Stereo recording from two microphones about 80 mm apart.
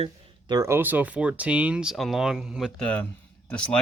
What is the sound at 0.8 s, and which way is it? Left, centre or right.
Speech, right.